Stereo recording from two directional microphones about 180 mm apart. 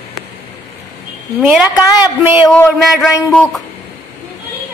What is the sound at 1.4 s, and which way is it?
Speech, 5° right (ahead or behind).